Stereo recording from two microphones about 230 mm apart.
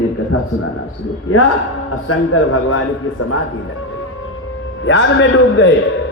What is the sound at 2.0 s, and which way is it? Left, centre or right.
A man's voice, left.